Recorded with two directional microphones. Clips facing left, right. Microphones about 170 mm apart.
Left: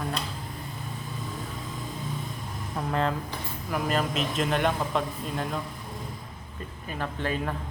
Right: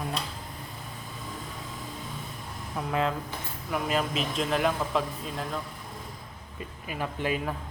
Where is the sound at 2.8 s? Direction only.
5° right (ahead or behind).